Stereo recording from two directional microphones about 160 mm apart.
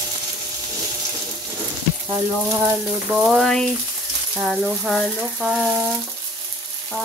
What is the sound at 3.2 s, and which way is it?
Frying, centre (ahead or behind).